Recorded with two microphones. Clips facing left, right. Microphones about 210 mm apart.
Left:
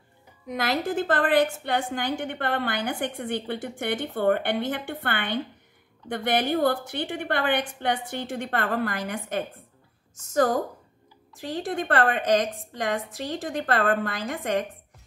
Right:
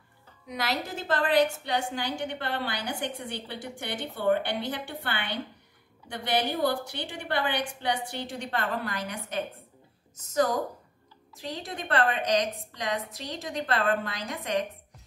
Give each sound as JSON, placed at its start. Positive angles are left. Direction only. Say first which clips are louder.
{"t": 0.5, "sound": "a woman's voice", "louder": "left 5 dB", "side_deg": 50}